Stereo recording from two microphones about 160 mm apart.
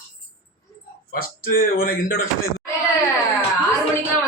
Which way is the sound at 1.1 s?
70° left (ahead or behind).